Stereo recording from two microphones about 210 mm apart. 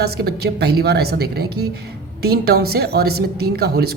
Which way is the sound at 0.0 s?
50° right (ahead or behind).